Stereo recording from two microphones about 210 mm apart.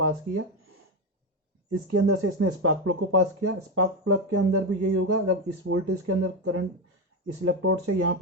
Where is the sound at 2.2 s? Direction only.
85° right.